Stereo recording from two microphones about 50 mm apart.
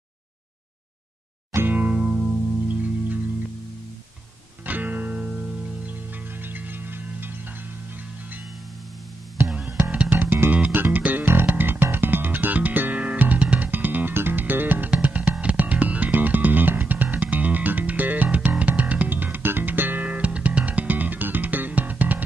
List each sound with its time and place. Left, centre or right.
1.7 s music: right
2.0 s music: centre
2.7 s music: right
4.6 s music: right
9.7 s music: right
10.1 s music: right
20.0 s music: right